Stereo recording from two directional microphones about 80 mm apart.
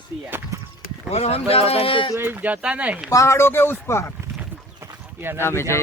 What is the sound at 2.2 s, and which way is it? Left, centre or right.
Speech, right.